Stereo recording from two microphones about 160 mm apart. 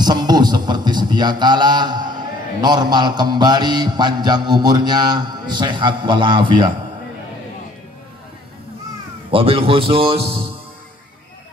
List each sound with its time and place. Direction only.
0.0 s speech: 25° right (ahead or behind)
9.3 s a man's voice: 35° right (ahead or behind)